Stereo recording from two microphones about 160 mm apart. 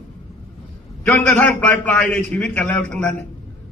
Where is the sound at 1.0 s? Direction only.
15° left (ahead or behind).